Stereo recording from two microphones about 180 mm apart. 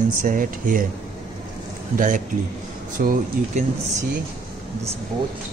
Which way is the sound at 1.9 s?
45° right (ahead or behind).